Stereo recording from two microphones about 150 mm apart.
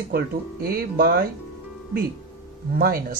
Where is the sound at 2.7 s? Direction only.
80° right.